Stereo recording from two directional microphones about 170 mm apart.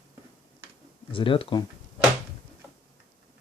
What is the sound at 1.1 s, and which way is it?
Speech, 30° left (ahead or behind).